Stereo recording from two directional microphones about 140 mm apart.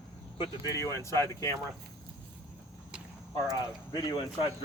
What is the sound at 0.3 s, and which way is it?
Speech, 20° left (ahead or behind).